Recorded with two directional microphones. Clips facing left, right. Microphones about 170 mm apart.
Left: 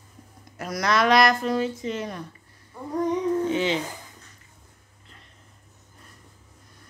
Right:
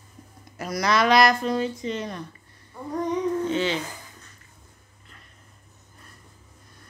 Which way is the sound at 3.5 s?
15° left (ahead or behind).